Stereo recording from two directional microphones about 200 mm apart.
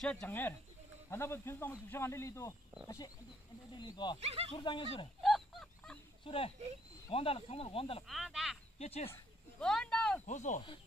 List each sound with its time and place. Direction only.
0.0 s speech: 5° left (ahead or behind)
3.7 s speech: 20° left (ahead or behind)
4.2 s speech: 30° right (ahead or behind)
4.5 s speech: 25° left (ahead or behind)
5.2 s fowl: centre (ahead or behind)
6.2 s speech: 25° left (ahead or behind)
8.1 s speech: centre (ahead or behind)
8.7 s speech: 30° left (ahead or behind)
9.1 s speech: 5° left (ahead or behind)
10.2 s speech: 40° left (ahead or behind)